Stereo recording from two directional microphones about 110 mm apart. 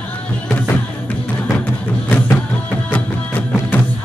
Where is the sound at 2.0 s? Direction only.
15° left (ahead or behind).